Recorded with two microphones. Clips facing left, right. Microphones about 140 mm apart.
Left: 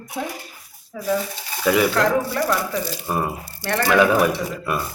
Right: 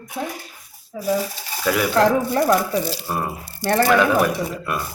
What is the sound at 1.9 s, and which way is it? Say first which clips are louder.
Speech: right 3 dB; 30° right (ahead or behind).